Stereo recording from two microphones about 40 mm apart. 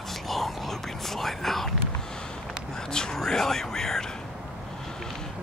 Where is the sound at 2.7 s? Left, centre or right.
Centre.